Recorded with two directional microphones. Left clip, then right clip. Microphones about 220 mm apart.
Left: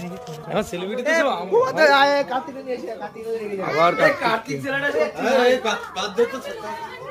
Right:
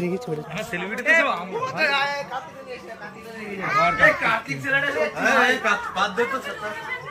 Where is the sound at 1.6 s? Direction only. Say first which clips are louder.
Left 8 dB; 25° left (ahead or behind).